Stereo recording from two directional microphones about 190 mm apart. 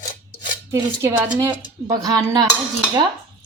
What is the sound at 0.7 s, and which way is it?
Speech, 15° right (ahead or behind).